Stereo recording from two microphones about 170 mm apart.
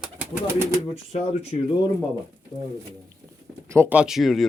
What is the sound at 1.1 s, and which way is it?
Speech, 40° left (ahead or behind).